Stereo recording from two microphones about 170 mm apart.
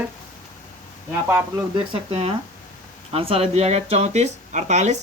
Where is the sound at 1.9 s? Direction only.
35° right (ahead or behind).